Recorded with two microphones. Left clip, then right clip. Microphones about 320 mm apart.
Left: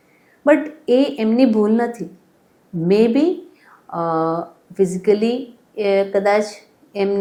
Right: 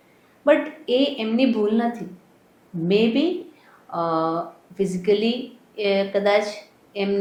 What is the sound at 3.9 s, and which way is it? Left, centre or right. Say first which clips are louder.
Speech: left 3 dB; left.